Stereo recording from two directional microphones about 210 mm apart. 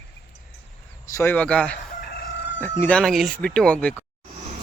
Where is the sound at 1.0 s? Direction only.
15° left (ahead or behind).